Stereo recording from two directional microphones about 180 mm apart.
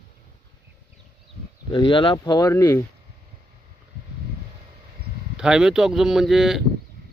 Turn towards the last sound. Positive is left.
turn(degrees=0)  # may be behind; listen again after turning